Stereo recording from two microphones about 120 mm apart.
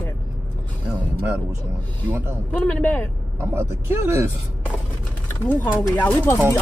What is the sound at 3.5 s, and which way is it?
Speech, 20° right (ahead or behind).